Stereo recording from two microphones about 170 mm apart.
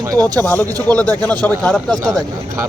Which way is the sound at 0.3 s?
10° left (ahead or behind).